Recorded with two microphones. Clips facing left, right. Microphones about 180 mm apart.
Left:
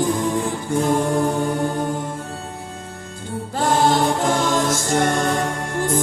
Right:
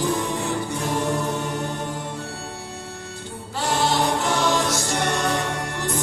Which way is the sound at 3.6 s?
50° left (ahead or behind).